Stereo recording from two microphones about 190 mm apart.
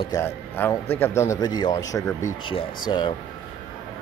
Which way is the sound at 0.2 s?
10° left (ahead or behind).